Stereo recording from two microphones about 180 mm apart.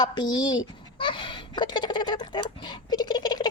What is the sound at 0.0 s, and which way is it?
Speech, 25° left (ahead or behind).